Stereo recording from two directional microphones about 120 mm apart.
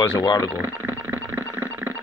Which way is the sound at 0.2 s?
35° left (ahead or behind).